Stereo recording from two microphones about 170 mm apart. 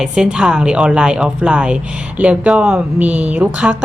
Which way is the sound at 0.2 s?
5° right (ahead or behind).